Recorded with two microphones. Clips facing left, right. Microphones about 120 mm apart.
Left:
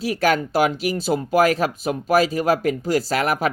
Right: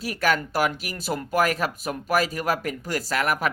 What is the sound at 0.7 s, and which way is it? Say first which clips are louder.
Speech: left 8 dB; 30° left (ahead or behind).